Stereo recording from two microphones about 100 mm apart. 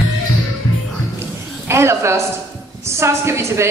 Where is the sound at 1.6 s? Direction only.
25° right (ahead or behind).